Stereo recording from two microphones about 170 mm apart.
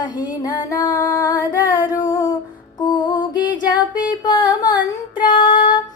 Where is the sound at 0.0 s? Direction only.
25° left (ahead or behind).